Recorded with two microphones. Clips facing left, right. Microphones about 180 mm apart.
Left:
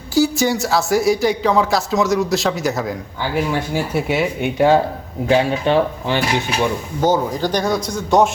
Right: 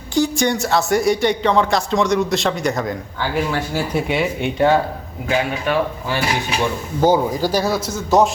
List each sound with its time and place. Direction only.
0.1 s speech: 5° left (ahead or behind)
5.3 s speech: 25° left (ahead or behind)
7.0 s speech: 10° right (ahead or behind)